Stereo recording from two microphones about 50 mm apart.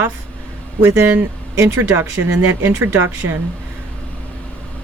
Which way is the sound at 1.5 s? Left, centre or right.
Right.